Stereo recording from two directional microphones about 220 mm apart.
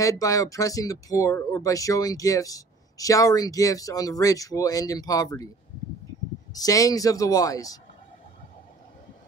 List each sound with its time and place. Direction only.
0.0 s speech: 15° left (ahead or behind)
6.5 s speech: 15° left (ahead or behind)